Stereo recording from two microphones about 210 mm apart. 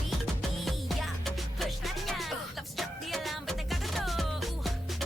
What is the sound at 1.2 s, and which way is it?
Music, centre (ahead or behind).